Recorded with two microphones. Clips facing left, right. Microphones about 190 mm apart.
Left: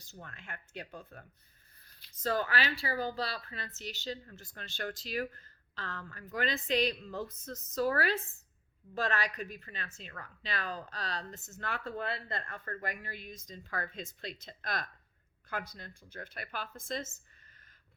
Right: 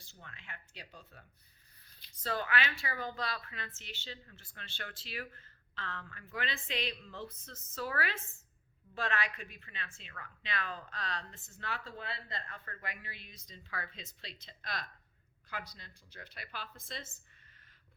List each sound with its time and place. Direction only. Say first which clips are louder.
0.0 s a woman's voice: left 6 dB; 45° left (ahead or behind)
2.2 s a woman's voice: left 3 dB; 40° left (ahead or behind)